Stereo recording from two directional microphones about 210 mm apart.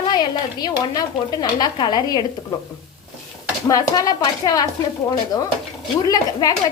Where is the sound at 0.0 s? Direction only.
20° left (ahead or behind).